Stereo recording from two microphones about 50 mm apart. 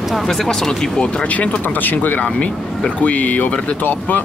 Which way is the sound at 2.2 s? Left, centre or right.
Left.